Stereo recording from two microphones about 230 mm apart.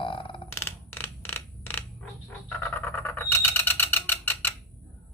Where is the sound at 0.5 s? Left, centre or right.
Centre.